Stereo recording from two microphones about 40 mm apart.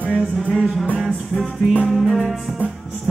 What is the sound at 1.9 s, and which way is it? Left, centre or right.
Music, centre.